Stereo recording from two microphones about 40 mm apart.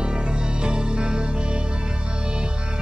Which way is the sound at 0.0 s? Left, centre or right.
Right.